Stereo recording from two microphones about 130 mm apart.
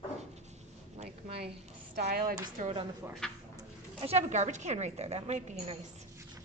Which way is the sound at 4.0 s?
55° right (ahead or behind).